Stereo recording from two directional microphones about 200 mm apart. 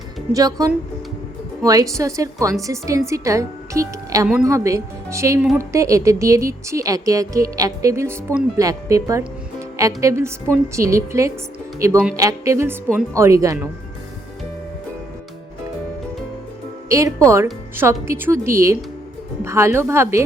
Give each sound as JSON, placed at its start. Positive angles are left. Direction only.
{"t": 0.3, "sound": "a woman's voice", "side_deg": -20}
{"t": 16.9, "sound": "a woman's voice", "side_deg": -15}